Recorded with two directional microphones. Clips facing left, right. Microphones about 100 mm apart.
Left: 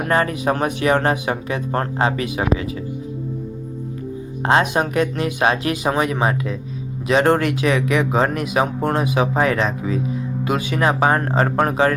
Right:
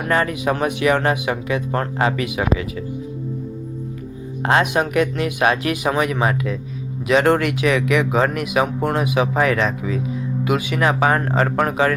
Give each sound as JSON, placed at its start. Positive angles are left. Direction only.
{"t": 0.0, "sound": "speech", "side_deg": 35}
{"t": 4.4, "sound": "speech", "side_deg": 25}